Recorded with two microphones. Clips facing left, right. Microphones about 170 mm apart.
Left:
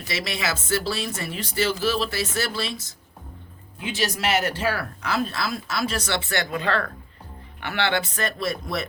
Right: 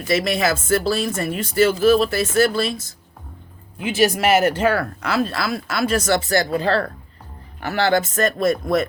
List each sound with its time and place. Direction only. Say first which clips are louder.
0.1 s speech: right 9 dB; 50° right (ahead or behind)
3.9 s speech: right 8 dB; 55° right (ahead or behind)
5.0 s speech: right 3 dB; 65° right (ahead or behind); by 8.9 s 50° right (ahead or behind)